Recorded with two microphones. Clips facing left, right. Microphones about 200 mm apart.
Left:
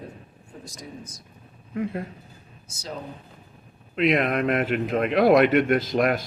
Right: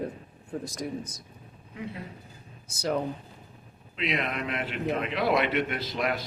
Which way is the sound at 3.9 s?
50° left (ahead or behind).